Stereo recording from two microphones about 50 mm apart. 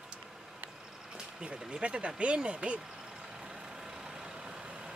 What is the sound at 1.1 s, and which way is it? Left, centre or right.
Speech, centre.